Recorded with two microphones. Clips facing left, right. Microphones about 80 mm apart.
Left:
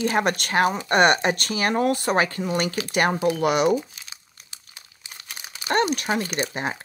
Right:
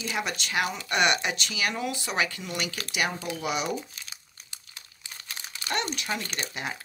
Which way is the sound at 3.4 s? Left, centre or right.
Left.